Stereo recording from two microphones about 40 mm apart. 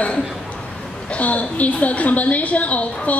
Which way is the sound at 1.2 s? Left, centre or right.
Left.